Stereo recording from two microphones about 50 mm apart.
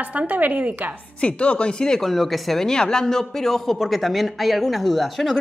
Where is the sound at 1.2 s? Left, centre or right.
Left.